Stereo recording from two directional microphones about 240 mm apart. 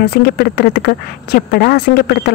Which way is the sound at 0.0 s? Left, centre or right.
Left.